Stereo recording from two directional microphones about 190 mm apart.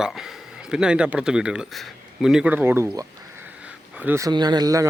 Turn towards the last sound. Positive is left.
turn(degrees=-20)  # may be behind; listen again after turning